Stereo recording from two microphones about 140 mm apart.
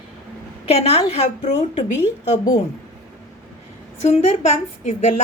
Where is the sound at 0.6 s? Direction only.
50° left (ahead or behind).